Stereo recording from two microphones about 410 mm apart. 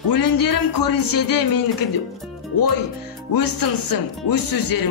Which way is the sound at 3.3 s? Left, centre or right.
Left.